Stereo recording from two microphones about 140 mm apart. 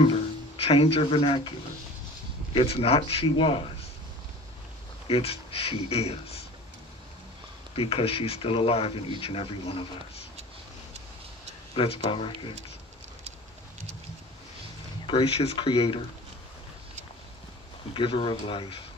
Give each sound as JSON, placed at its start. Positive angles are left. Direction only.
{"t": 0.0, "sound": "speech", "side_deg": 45}
{"t": 2.5, "sound": "a man's voice", "side_deg": 45}
{"t": 5.0, "sound": "speech", "side_deg": 45}
{"t": 7.7, "sound": "speech", "side_deg": 45}
{"t": 11.7, "sound": "a man's voice", "side_deg": 40}
{"t": 15.0, "sound": "a man's voice", "side_deg": 40}
{"t": 17.9, "sound": "a man's voice", "side_deg": 40}